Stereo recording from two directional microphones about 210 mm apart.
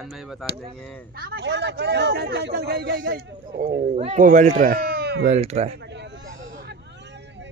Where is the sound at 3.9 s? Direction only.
30° right (ahead or behind); by 5.2 s 50° right (ahead or behind).